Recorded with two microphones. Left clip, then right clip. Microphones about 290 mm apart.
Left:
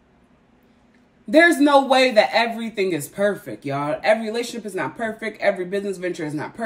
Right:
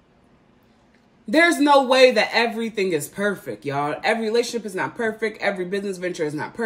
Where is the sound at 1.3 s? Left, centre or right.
Centre.